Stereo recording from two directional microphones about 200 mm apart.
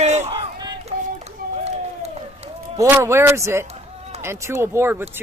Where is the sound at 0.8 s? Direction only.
35° right (ahead or behind).